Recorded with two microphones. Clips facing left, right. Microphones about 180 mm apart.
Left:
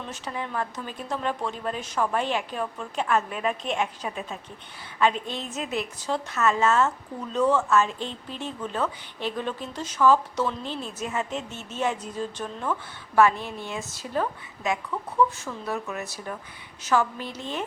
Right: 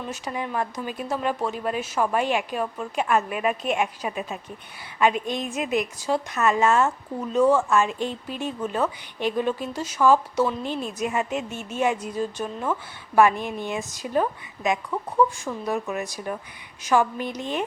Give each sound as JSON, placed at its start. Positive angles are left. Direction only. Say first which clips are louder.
{"t": 0.0, "sound": "speech", "louder": "right 3 dB", "side_deg": -10}